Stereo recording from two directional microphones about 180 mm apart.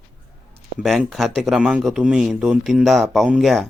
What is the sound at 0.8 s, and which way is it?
Speech, centre (ahead or behind).